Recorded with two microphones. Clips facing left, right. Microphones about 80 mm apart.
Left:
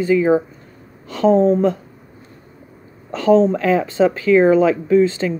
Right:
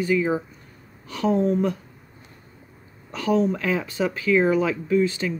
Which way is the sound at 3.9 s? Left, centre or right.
Left.